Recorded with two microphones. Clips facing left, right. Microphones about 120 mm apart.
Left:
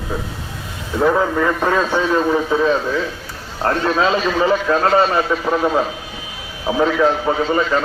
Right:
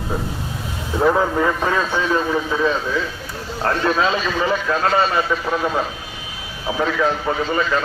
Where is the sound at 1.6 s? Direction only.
15° left (ahead or behind).